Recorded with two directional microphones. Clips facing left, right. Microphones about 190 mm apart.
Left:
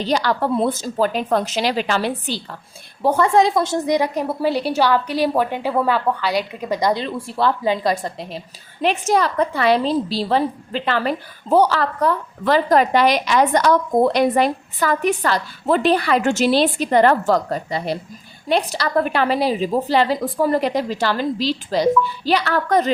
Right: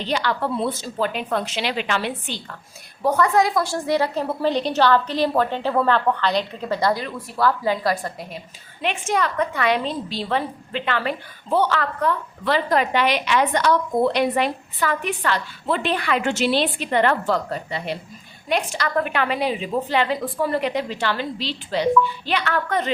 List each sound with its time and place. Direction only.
0.0 s a woman's voice: 40° left (ahead or behind); by 7.0 s 15° left (ahead or behind)
7.0 s a woman's voice: 25° left (ahead or behind)
8.8 s a woman's voice: 35° left (ahead or behind)